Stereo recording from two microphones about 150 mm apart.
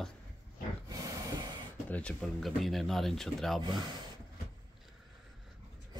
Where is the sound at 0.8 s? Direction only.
25° right (ahead or behind).